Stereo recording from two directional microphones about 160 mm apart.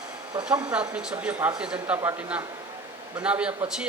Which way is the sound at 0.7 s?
5° right (ahead or behind).